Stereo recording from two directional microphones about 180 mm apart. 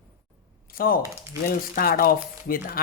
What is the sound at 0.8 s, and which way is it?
Speech, 55° left (ahead or behind).